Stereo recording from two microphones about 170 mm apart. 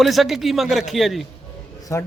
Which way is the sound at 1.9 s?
15° left (ahead or behind).